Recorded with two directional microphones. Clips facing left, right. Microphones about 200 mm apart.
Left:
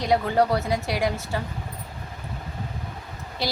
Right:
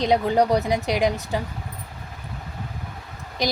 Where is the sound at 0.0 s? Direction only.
20° right (ahead or behind).